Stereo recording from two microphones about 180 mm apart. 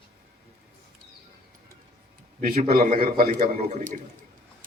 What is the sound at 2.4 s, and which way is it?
A man's voice, 50° right (ahead or behind).